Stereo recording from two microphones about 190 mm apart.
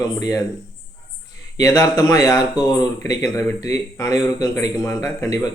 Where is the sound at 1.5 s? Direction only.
15° left (ahead or behind).